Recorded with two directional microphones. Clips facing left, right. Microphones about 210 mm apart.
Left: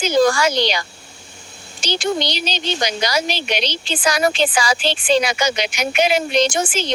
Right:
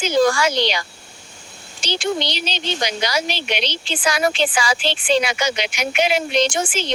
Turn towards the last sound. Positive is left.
turn(degrees=40)  # may be behind; listen again after turning